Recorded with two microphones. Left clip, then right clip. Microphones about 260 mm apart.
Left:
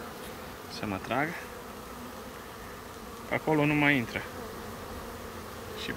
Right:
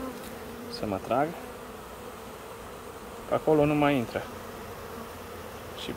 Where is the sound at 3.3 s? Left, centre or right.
Centre.